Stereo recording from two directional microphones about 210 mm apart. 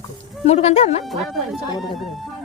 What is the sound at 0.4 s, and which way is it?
Speech, 30° left (ahead or behind).